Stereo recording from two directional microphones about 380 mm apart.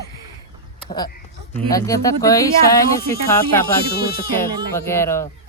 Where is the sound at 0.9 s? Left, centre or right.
Centre.